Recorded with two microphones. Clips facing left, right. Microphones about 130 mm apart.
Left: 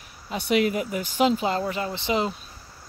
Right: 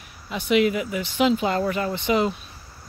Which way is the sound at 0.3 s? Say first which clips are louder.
Right 2 dB; 40° left (ahead or behind).